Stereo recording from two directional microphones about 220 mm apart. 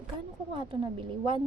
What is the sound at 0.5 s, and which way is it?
Speech, 20° right (ahead or behind).